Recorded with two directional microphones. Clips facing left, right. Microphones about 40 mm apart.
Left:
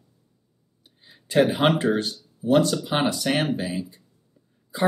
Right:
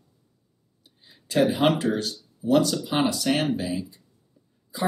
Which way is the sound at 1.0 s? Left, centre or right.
Left.